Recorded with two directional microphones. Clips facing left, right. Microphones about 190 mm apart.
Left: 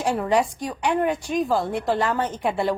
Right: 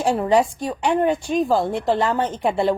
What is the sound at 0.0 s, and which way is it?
A woman's voice, 30° right (ahead or behind).